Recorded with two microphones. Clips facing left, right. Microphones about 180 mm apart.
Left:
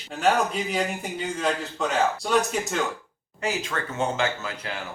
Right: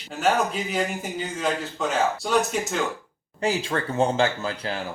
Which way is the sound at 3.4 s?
35° right (ahead or behind).